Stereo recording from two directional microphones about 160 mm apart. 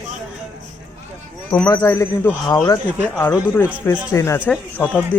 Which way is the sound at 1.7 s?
20° left (ahead or behind).